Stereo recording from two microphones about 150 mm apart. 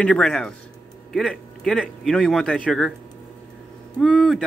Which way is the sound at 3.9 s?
5° left (ahead or behind).